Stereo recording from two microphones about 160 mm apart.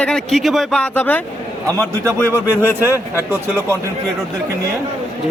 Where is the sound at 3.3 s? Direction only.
15° right (ahead or behind).